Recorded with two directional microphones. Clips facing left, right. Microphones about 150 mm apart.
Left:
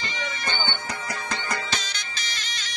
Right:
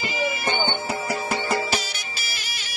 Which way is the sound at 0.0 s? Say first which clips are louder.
Right 7 dB; 10° right (ahead or behind).